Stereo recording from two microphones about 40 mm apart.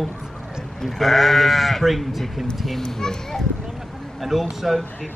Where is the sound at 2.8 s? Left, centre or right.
Centre.